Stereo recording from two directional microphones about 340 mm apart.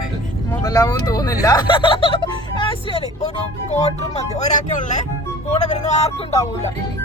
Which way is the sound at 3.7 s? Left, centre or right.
Centre.